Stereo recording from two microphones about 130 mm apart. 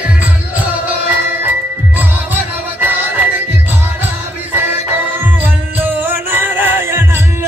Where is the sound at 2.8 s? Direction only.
15° right (ahead or behind).